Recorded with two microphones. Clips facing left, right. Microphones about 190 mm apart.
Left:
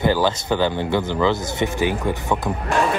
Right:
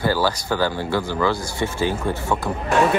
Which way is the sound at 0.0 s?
20° left (ahead or behind).